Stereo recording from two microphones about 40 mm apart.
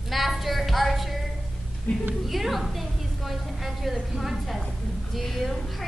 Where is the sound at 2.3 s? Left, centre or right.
Centre.